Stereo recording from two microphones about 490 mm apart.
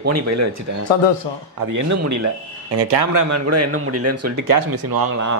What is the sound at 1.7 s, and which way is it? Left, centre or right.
Speech, right.